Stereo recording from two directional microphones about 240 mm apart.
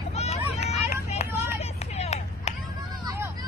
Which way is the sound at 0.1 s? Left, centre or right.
Left.